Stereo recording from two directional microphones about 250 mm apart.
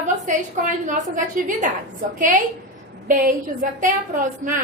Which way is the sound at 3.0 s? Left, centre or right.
Right.